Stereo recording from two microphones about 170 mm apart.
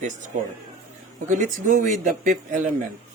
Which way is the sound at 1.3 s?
50° right (ahead or behind).